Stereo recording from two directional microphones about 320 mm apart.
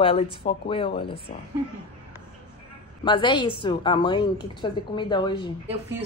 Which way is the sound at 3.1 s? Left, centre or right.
Centre.